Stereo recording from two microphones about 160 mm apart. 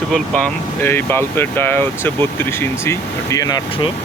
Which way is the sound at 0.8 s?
15° left (ahead or behind).